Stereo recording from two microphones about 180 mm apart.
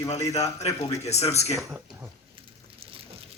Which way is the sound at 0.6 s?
35° left (ahead or behind).